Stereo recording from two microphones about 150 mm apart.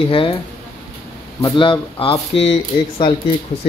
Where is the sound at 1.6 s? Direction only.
35° left (ahead or behind).